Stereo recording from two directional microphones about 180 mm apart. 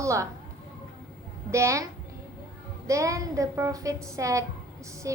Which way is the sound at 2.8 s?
15° right (ahead or behind).